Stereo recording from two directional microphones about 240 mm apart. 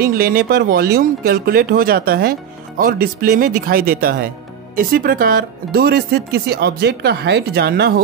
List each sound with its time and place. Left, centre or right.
0.0 s speech: right